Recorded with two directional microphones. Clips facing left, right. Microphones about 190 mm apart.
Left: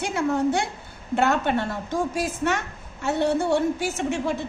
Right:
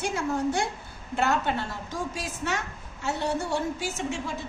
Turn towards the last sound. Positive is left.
turn(degrees=60)  # may be behind; listen again after turning